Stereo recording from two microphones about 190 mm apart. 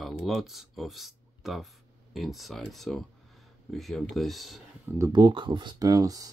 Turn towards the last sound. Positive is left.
turn(degrees=-20)  # may be behind; listen again after turning